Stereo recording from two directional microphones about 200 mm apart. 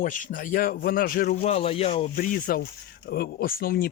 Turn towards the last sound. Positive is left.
turn(degrees=50)  # may be behind; listen again after turning